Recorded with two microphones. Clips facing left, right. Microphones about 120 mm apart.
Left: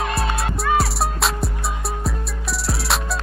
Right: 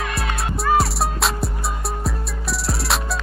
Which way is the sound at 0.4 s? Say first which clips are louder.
Right 4 dB; centre (ahead or behind).